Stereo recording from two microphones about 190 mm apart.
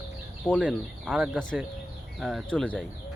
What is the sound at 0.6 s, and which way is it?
Speech, 5° right (ahead or behind).